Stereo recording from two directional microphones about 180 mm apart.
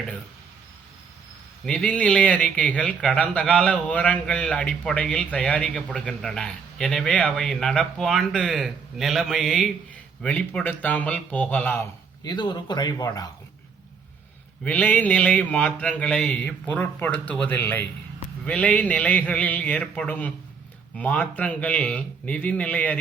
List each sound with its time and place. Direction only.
1.6 s speech: 5° left (ahead or behind)
12.2 s speech: 25° left (ahead or behind)
14.6 s speech: 5° left (ahead or behind)